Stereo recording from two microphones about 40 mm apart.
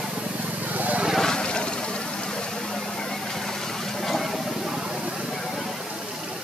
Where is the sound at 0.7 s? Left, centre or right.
Right.